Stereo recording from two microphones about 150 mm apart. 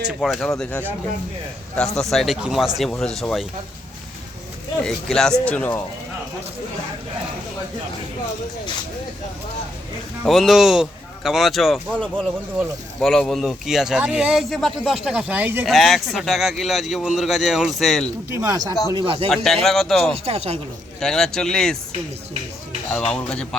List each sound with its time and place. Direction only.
0.2 s speech: centre (ahead or behind)
2.0 s speech: centre (ahead or behind)
4.8 s speech: 5° left (ahead or behind)
10.2 s speech: centre (ahead or behind)
15.6 s speech: centre (ahead or behind)
18.3 s speech: 15° right (ahead or behind)
18.7 s speech: 25° left (ahead or behind)
18.9 s speech: 35° right (ahead or behind)
19.3 s speech: 5° left (ahead or behind)
20.1 s speech: 40° right (ahead or behind)
21.0 s speech: 5° left (ahead or behind)
22.9 s speech: 10° left (ahead or behind)